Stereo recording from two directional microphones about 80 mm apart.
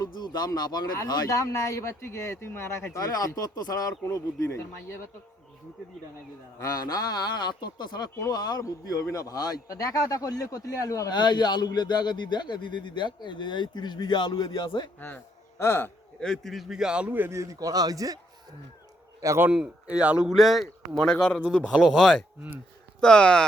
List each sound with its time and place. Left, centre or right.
0.0 s speech: left
1.0 s speech: left
2.9 s a man's voice: left
6.7 s a man's voice: left
11.1 s speech: left
15.5 s speech: left
16.2 s a man's voice: centre
17.2 s speech: right
19.5 s speech: centre
20.3 s a man's voice: centre
21.6 s speech: centre
23.0 s speech: centre